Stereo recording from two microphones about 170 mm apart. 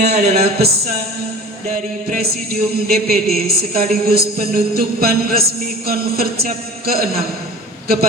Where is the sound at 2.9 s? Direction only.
60° right (ahead or behind).